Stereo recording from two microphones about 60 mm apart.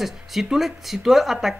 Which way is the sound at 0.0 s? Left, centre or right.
Centre.